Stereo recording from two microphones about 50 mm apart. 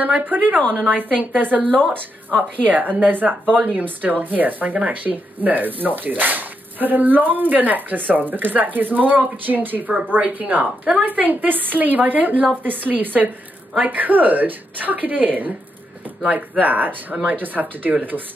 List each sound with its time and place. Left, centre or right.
0.2 s speech: right
17.1 s speech: right
17.4 s speech: right